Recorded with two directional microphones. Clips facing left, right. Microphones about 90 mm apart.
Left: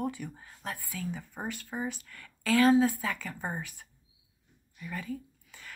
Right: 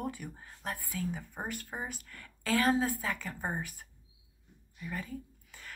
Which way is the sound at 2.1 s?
30° right (ahead or behind).